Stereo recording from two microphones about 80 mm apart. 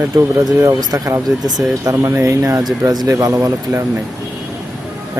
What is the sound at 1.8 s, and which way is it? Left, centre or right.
Speech, right.